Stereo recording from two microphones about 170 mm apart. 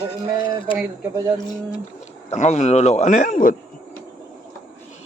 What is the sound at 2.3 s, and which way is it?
Speech, 40° left (ahead or behind).